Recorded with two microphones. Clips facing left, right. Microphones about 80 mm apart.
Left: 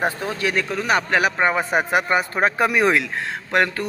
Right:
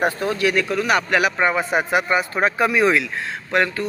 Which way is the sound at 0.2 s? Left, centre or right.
Left.